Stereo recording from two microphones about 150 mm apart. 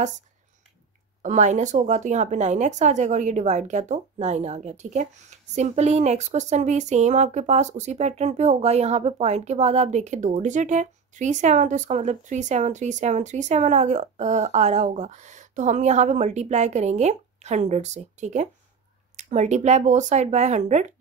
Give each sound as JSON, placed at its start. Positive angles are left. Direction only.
{"t": 1.2, "sound": "speech", "side_deg": -55}